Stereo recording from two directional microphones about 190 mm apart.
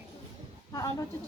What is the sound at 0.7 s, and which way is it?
Speech, 20° left (ahead or behind).